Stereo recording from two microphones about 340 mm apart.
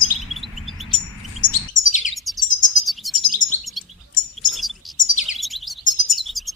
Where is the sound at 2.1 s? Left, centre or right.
Centre.